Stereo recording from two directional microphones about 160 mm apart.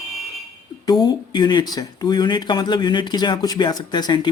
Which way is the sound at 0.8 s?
25° left (ahead or behind).